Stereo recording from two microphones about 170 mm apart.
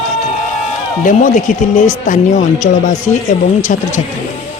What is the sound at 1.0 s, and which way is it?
Speech, 50° left (ahead or behind).